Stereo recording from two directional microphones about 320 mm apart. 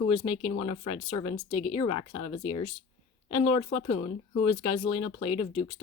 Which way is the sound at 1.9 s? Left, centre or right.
Left.